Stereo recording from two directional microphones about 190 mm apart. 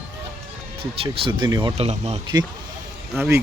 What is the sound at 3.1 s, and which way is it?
Speech, 15° right (ahead or behind).